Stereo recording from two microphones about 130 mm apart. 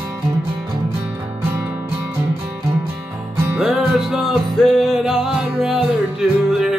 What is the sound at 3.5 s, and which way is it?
Music, 5° right (ahead or behind).